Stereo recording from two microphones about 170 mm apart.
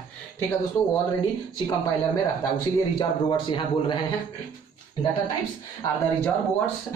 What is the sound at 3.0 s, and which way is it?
Speech, 25° left (ahead or behind).